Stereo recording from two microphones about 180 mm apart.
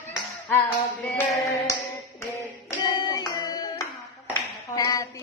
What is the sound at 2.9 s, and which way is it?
Clapping, 25° left (ahead or behind).